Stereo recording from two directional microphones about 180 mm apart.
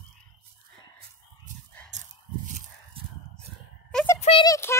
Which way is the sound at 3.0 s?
30° right (ahead or behind).